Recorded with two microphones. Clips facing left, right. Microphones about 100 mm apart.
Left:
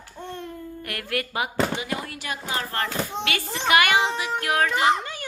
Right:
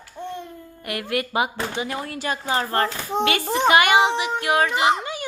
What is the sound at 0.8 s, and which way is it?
Speech, 20° right (ahead or behind).